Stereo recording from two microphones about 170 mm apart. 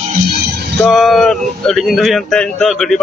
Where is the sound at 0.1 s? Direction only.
65° right (ahead or behind).